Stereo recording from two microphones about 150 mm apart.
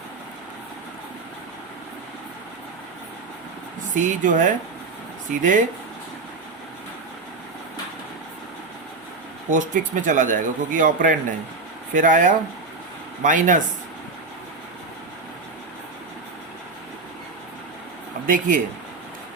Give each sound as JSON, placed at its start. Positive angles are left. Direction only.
{"t": 3.9, "sound": "speech", "side_deg": -55}
{"t": 9.5, "sound": "speech", "side_deg": -60}
{"t": 18.3, "sound": "speech", "side_deg": -60}